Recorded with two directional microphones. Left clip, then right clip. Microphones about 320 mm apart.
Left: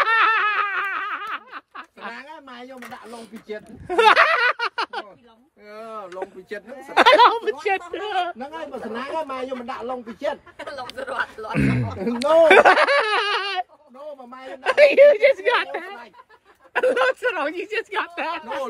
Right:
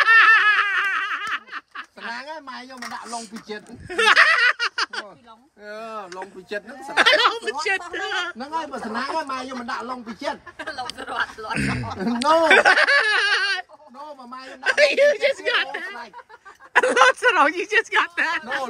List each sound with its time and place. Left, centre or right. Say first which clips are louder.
0.0 s laughter: right 4 dB; centre
3.1 s speech: right 2 dB; centre
11.0 s speech: left 2 dB; left
11.5 s speech: left 4 dB; centre
16.7 s speech: right 4 dB; centre